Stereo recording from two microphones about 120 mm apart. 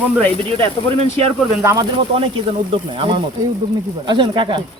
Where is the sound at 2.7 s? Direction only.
45° right (ahead or behind).